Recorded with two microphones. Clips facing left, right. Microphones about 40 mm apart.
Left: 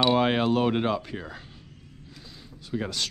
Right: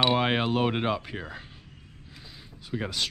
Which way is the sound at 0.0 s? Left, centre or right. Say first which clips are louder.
Left 2 dB; centre.